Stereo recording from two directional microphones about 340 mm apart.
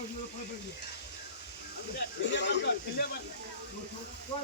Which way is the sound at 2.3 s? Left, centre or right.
Left.